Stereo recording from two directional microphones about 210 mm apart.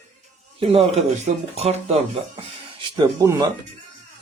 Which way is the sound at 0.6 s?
30° right (ahead or behind).